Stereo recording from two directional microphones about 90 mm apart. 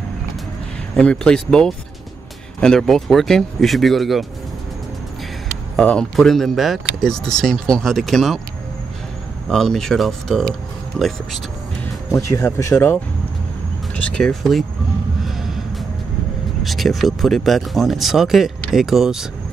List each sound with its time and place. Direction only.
0.9 s speech: 10° left (ahead or behind)
5.8 s speech: 5° left (ahead or behind)
9.5 s speech: 5° left (ahead or behind)
12.1 s speech: 35° left (ahead or behind)
13.9 s speech: 10° left (ahead or behind)
15.2 s music: 5° right (ahead or behind)
16.6 s speech: centre (ahead or behind)